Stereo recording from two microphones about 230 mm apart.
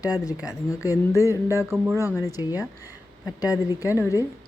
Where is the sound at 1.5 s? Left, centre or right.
Centre.